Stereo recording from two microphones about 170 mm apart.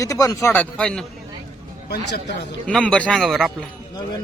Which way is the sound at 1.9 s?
85° left.